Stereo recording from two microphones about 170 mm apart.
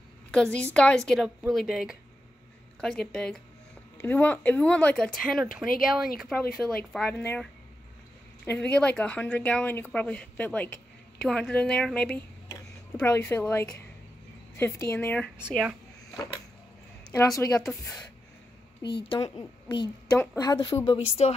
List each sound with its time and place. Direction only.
0.3 s a woman's voice: 5° left (ahead or behind)
8.5 s a woman's voice: 5° left (ahead or behind)
12.4 s speech: 15° left (ahead or behind)
15.4 s speech: 5° right (ahead or behind)
17.1 s speech: 15° left (ahead or behind)
19.0 s a woman's voice: 25° left (ahead or behind)